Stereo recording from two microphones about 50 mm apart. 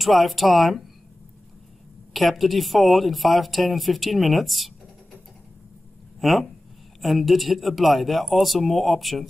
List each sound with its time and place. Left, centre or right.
0.0 s speech: centre
2.1 s speech: centre
6.2 s speech: centre